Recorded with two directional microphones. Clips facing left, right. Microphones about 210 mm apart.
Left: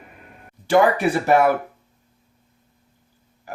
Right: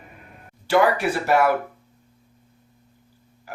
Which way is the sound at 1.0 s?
50° left (ahead or behind).